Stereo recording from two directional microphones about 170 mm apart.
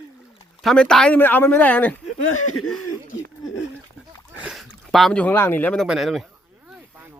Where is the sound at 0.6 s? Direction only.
5° left (ahead or behind).